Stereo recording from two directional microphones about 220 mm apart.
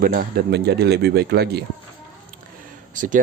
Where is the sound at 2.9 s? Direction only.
35° right (ahead or behind).